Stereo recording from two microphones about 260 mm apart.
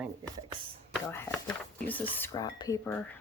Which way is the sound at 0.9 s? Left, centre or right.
Centre.